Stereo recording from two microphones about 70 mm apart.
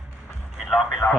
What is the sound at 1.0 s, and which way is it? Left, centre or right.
Radio, left.